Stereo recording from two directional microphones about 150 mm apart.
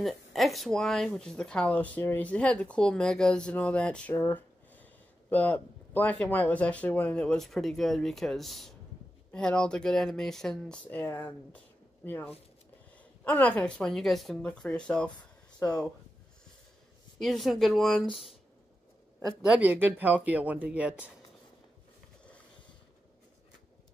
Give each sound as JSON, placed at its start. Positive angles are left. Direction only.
{"t": 0.0, "sound": "speech", "side_deg": 0}
{"t": 17.2, "sound": "speech", "side_deg": 0}